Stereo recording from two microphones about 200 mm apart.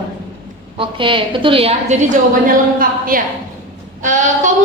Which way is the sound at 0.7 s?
25° right (ahead or behind).